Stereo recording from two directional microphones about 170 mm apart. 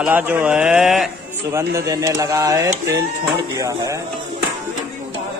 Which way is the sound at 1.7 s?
20° right (ahead or behind).